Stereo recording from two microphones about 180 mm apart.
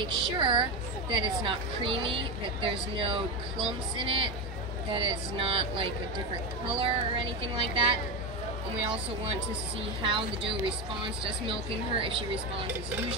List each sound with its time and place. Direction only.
0.0 s a woman's voice: 25° right (ahead or behind)
10.0 s a woman's voice: 30° right (ahead or behind)